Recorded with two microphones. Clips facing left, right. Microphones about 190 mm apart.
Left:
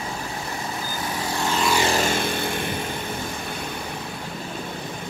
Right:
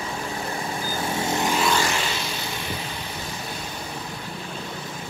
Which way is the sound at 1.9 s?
45° left (ahead or behind).